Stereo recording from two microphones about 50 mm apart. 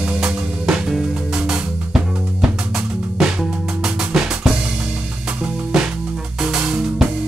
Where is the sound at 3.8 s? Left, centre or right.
Centre.